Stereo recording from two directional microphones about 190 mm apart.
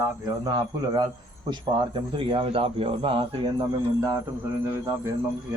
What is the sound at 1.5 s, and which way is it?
A man's voice, 25° right (ahead or behind).